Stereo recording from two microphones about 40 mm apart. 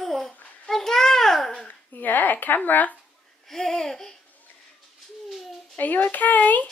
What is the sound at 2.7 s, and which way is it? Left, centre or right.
Speech, left.